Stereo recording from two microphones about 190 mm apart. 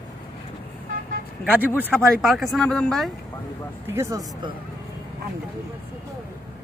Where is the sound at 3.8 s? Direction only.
15° right (ahead or behind).